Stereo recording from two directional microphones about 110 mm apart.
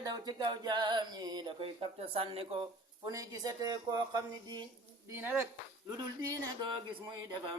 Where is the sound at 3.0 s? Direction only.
30° right (ahead or behind).